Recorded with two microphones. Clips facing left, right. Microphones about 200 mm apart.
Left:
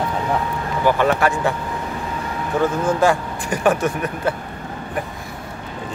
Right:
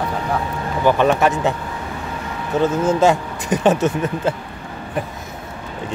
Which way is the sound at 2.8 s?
20° right (ahead or behind).